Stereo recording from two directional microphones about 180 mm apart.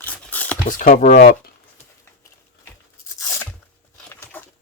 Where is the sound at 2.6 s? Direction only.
15° left (ahead or behind).